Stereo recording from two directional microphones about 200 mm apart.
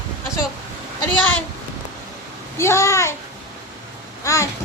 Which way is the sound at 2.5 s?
15° left (ahead or behind).